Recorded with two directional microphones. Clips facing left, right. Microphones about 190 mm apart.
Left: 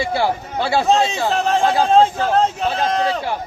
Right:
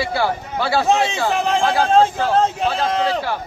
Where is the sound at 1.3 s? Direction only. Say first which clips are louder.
Left 1 dB; 15° right (ahead or behind).